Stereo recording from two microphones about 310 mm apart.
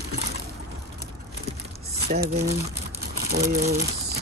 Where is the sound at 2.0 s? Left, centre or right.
Right.